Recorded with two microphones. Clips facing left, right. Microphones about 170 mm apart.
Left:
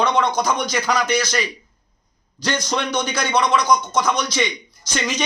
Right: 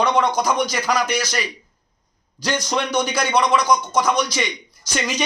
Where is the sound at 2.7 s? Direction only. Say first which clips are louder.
Right 1 dB; 10° right (ahead or behind).